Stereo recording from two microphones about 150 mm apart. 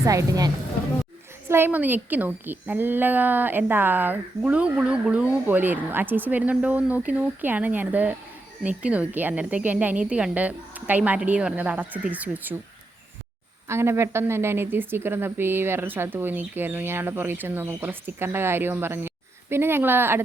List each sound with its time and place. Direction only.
0.0 s a woman's voice: 20° right (ahead or behind)
13.7 s a woman's voice: 15° right (ahead or behind)